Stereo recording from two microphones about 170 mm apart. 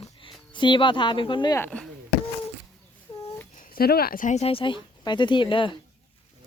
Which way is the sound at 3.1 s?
25° left (ahead or behind).